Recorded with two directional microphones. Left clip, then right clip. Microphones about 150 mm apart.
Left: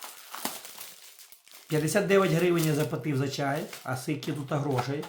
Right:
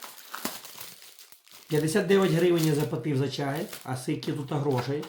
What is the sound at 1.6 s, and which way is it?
Speech, 25° left (ahead or behind).